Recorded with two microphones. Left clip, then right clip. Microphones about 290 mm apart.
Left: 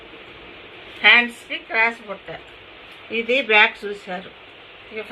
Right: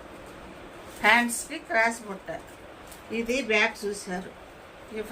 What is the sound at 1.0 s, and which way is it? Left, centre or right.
Speech, centre.